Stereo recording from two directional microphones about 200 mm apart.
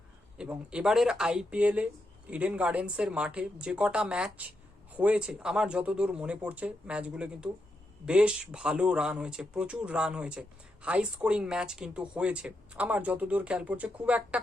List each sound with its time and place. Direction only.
0.3 s speech: 5° right (ahead or behind)